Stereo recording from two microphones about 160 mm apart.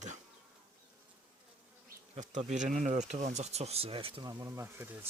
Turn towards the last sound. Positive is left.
turn(degrees=-15)  # may be behind; listen again after turning